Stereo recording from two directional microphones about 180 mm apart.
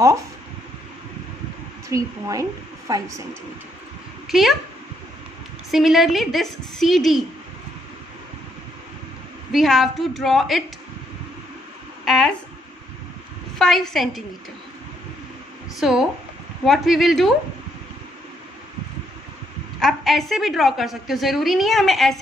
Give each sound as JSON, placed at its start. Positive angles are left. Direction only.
{"t": 1.9, "sound": "speech", "side_deg": -20}
{"t": 4.3, "sound": "a woman's voice", "side_deg": 0}
{"t": 5.7, "sound": "a woman's voice", "side_deg": 0}
{"t": 9.5, "sound": "a woman's voice", "side_deg": 0}
{"t": 12.0, "sound": "a sound", "side_deg": 0}
{"t": 13.6, "sound": "a woman's voice", "side_deg": 0}
{"t": 15.8, "sound": "a woman's voice", "side_deg": -5}
{"t": 19.8, "sound": "a woman's voice", "side_deg": 0}